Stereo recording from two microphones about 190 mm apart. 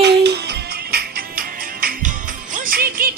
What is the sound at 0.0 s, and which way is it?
Music, 65° right (ahead or behind).